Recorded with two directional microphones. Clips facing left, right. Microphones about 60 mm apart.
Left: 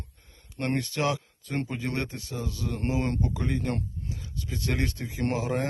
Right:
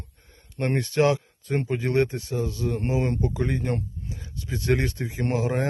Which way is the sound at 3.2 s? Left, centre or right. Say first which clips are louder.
Right 3 dB; right.